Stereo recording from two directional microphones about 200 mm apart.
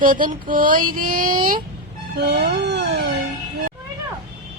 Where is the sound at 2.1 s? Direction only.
55° right (ahead or behind).